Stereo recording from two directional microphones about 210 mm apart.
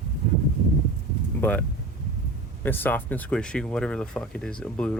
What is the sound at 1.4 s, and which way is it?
Speech, 10° left (ahead or behind).